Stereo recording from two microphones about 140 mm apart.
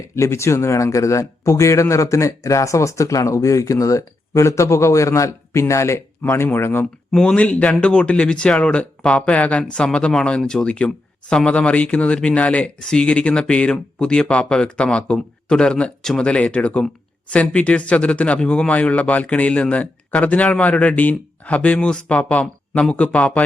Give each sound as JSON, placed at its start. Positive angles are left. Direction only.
{"t": 0.2, "sound": "a man's voice", "side_deg": 20}
{"t": 7.1, "sound": "speech", "side_deg": 5}